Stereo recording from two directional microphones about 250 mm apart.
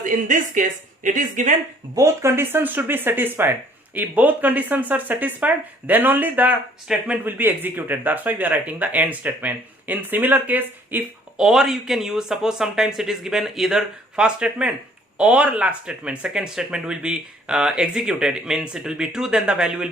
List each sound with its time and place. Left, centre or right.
0.0 s speech: right
2.0 s speech: centre